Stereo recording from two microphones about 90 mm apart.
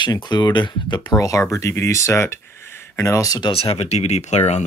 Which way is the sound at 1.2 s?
40° left (ahead or behind).